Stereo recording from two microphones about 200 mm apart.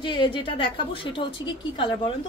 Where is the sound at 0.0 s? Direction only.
25° left (ahead or behind).